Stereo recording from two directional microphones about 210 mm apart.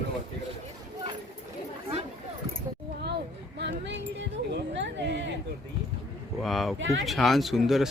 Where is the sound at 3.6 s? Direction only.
55° right (ahead or behind).